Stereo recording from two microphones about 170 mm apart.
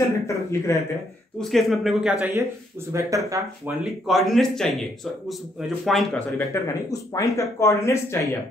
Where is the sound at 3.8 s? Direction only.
Centre (ahead or behind).